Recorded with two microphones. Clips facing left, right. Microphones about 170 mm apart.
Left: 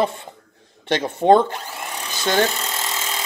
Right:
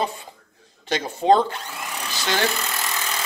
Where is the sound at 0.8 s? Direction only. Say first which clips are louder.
Left 3 dB; 55° left (ahead or behind).